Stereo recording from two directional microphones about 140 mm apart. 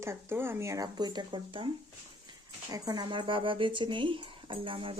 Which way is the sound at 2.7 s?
30° right (ahead or behind).